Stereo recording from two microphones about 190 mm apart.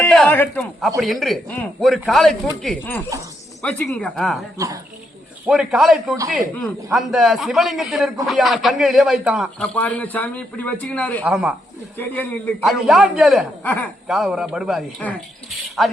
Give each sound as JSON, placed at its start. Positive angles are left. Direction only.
{"t": 0.0, "sound": "speech", "side_deg": 5}
{"t": 4.5, "sound": "speech", "side_deg": -15}
{"t": 5.5, "sound": "speech", "side_deg": 0}
{"t": 9.7, "sound": "a man's voice", "side_deg": 10}
{"t": 11.2, "sound": "speech", "side_deg": -5}
{"t": 11.9, "sound": "a man's voice", "side_deg": 10}
{"t": 14.1, "sound": "speech", "side_deg": 0}